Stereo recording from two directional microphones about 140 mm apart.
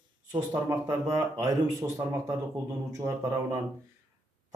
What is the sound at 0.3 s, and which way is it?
Speech, 20° right (ahead or behind).